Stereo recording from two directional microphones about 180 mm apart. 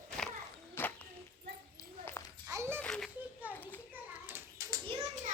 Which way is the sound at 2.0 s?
10° left (ahead or behind).